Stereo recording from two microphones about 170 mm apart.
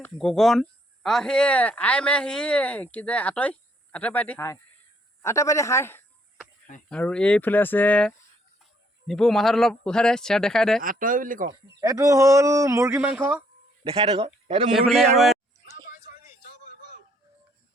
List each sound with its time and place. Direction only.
0.2 s speech: centre (ahead or behind)
10.8 s speech: 55° right (ahead or behind)
11.8 s speech: 20° right (ahead or behind)
13.8 s a man's voice: 35° right (ahead or behind)
14.7 s speech: centre (ahead or behind)